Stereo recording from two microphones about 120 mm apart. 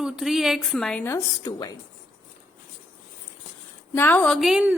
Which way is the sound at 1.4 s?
35° left (ahead or behind).